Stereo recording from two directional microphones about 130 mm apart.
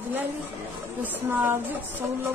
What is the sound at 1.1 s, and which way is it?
Speech, 15° right (ahead or behind).